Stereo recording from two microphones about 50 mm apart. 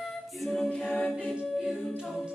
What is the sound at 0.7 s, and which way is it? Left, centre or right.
A capella, left.